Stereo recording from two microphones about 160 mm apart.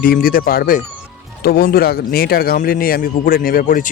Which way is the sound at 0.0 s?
65° left (ahead or behind).